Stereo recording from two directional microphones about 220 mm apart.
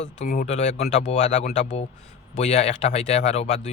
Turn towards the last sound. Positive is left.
turn(degrees=30)  # may be behind; listen again after turning